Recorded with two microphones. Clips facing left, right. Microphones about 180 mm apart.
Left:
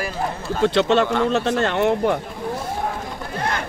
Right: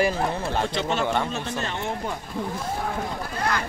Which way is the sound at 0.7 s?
70° left (ahead or behind).